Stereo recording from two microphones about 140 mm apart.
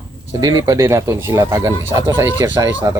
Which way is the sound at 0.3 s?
25° right (ahead or behind).